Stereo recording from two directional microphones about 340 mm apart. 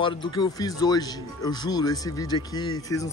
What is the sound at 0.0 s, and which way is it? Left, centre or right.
Speech, centre.